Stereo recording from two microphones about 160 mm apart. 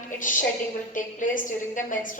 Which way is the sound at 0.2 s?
55° left (ahead or behind).